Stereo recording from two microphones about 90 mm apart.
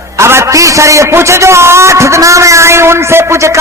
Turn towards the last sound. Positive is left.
turn(degrees=-35)  # may be behind; listen again after turning